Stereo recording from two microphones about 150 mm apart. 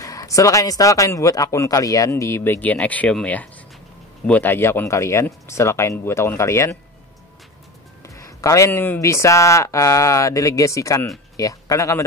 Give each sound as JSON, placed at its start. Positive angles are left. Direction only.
{"t": 0.0, "sound": "speech", "side_deg": 20}
{"t": 8.2, "sound": "speech", "side_deg": 20}